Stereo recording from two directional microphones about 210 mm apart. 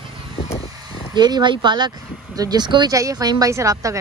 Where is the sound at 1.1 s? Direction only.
20° right (ahead or behind).